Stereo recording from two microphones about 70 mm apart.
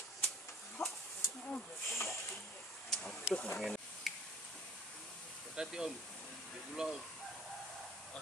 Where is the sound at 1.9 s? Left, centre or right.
Left.